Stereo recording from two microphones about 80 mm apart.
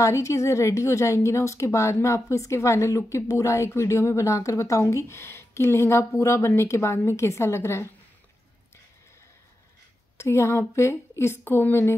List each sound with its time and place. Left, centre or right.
0.0 s a woman's voice: left
10.1 s a woman's voice: left